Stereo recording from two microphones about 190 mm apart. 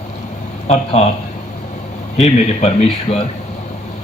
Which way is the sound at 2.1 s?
35° left (ahead or behind).